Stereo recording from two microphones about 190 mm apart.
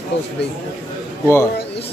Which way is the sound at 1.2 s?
15° left (ahead or behind).